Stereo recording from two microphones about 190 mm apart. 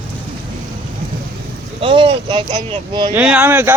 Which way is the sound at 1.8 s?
30° right (ahead or behind).